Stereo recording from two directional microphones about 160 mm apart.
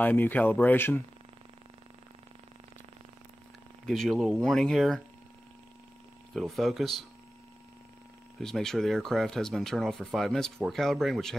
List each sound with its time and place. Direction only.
0.0 s speech: 10° left (ahead or behind)
3.8 s speech: centre (ahead or behind)
6.3 s speech: centre (ahead or behind)
8.4 s speech: 5° left (ahead or behind)